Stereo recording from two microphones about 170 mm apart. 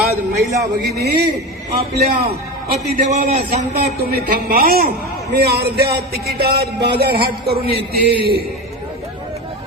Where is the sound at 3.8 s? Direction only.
60° right (ahead or behind).